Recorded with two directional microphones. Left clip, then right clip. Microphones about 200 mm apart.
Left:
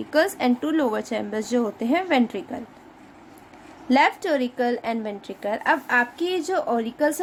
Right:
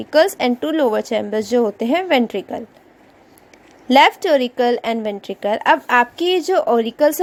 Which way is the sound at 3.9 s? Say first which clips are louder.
Right 8 dB; 35° right (ahead or behind).